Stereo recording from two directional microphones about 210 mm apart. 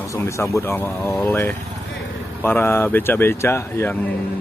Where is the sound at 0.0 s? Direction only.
15° left (ahead or behind).